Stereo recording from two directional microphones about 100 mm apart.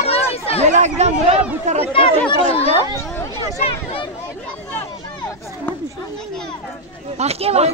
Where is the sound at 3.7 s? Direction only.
70° left (ahead or behind).